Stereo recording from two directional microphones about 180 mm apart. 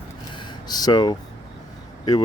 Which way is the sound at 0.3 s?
25° left (ahead or behind).